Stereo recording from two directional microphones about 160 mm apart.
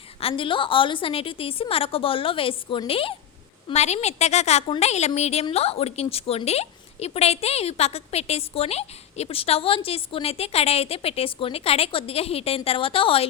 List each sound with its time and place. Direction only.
0.2 s a woman's voice: 35° left (ahead or behind)